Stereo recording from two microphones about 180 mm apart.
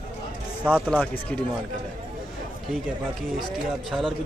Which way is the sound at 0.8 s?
5° left (ahead or behind).